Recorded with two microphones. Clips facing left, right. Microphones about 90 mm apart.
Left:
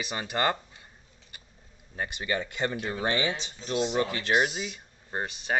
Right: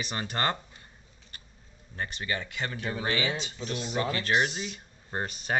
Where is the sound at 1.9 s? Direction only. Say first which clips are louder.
Left 3 dB; 15° left (ahead or behind).